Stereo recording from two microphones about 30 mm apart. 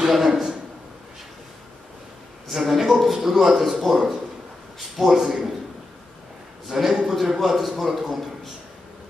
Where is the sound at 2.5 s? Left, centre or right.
Centre.